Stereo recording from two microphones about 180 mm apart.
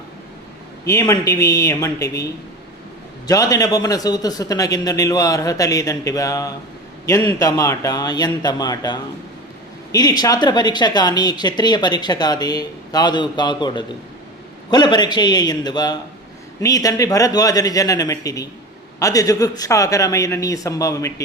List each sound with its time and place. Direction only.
0.9 s speech: 15° left (ahead or behind)
3.2 s speech: 20° left (ahead or behind)